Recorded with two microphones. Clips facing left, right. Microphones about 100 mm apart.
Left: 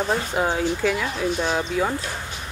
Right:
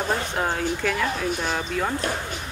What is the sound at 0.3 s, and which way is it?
Speech, 5° left (ahead or behind).